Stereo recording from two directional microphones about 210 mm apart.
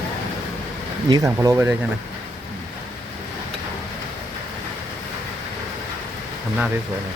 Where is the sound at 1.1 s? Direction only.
15° right (ahead or behind).